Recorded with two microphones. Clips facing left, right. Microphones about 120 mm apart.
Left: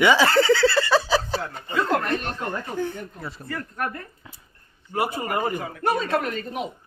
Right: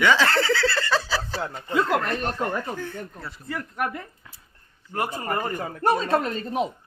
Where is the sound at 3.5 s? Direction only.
15° right (ahead or behind).